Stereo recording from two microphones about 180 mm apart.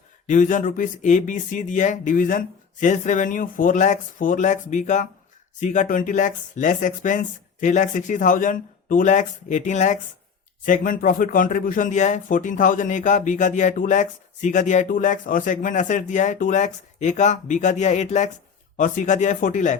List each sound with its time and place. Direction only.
0.3 s speech: 45° left (ahead or behind)